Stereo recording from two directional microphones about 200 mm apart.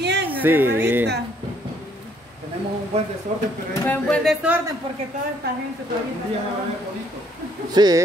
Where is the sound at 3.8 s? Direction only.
5° left (ahead or behind).